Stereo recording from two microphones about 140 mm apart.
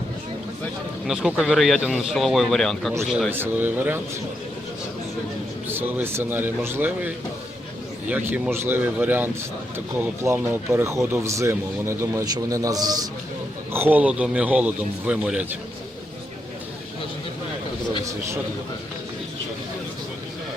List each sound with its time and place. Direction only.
1.0 s a man's voice: 5° right (ahead or behind)
3.3 s a man's voice: 15° right (ahead or behind)
5.6 s a man's voice: 15° right (ahead or behind)
13.7 s a man's voice: 15° right (ahead or behind)